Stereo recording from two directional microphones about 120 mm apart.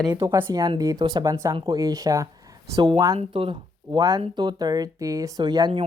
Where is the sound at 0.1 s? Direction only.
35° right (ahead or behind).